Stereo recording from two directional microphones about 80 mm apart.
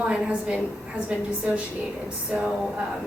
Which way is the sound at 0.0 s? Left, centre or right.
Centre.